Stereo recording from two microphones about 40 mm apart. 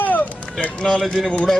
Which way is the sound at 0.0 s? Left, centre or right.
Left.